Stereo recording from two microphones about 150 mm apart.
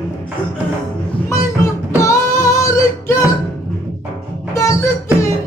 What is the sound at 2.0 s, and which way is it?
Music, 20° left (ahead or behind).